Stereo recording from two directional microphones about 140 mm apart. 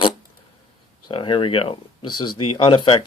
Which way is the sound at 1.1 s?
35° left (ahead or behind).